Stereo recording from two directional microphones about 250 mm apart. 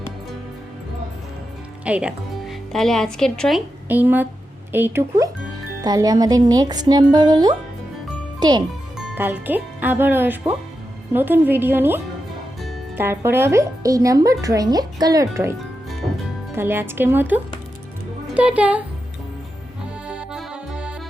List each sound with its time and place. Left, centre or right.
1.8 s a child's voice: centre
9.0 s speech: centre
16.6 s speech: centre
20.1 s accordion: centre